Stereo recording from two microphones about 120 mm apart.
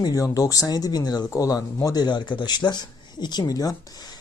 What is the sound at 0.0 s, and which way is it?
Speech, 30° left (ahead or behind).